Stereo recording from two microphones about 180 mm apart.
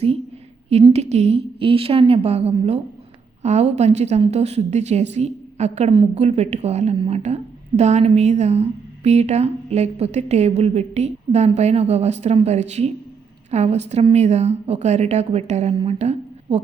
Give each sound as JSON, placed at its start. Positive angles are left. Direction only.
{"t": 0.9, "sound": "a woman's voice", "side_deg": -35}